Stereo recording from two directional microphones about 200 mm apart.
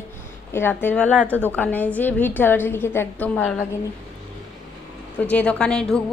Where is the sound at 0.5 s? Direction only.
10° left (ahead or behind).